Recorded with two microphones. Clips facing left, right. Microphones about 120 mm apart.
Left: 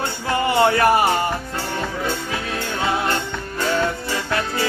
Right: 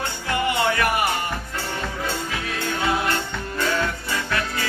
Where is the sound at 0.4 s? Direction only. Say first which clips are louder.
Left 7 dB; 30° left (ahead or behind).